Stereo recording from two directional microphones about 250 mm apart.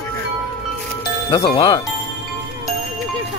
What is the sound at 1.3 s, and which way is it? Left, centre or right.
Speech, centre.